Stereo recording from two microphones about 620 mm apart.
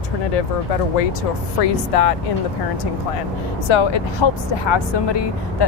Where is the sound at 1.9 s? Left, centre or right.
Left.